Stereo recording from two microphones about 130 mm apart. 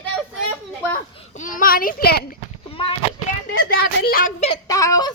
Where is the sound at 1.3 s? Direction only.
85° left.